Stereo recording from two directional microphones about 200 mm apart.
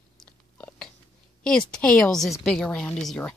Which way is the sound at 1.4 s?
5° left (ahead or behind).